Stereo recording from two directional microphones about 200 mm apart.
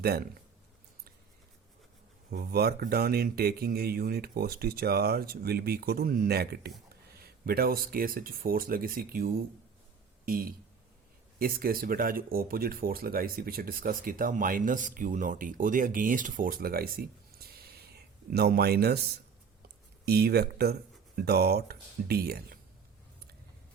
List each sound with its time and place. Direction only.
0.0 s speech: 50° right (ahead or behind)
2.3 s speech: 50° right (ahead or behind)
17.5 s a sound: 50° right (ahead or behind)
20.1 s speech: 50° right (ahead or behind)